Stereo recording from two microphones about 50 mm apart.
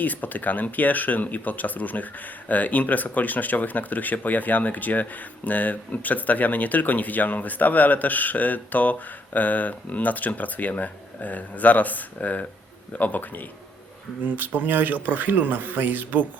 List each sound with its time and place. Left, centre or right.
0.0 s speech: left
14.2 s speech: right